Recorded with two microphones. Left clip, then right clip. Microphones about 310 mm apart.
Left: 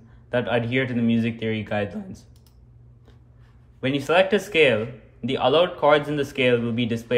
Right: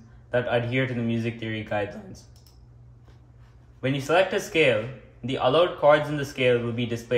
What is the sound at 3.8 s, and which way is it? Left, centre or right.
Speech, left.